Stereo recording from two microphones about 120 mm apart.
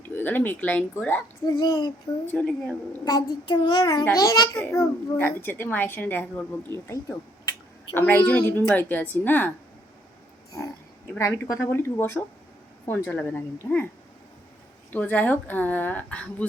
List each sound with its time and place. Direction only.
0.1 s a woman's voice: 15° left (ahead or behind)
1.5 s child singing: 35° left (ahead or behind)
2.2 s a woman's voice: 10° left (ahead or behind)
3.0 s child singing: 35° left (ahead or behind)
4.5 s a woman's voice: 20° left (ahead or behind)
7.9 s a woman's voice: 15° left (ahead or behind)
11.2 s a woman's voice: 25° left (ahead or behind)
14.9 s a woman's voice: 15° left (ahead or behind)